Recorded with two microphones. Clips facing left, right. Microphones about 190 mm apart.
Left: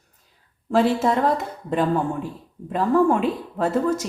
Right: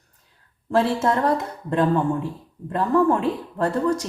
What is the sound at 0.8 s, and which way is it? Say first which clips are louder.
Speech: left 1 dB; 5° left (ahead or behind).